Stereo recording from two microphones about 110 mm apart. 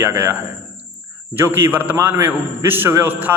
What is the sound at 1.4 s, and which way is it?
A man's voice, 20° right (ahead or behind).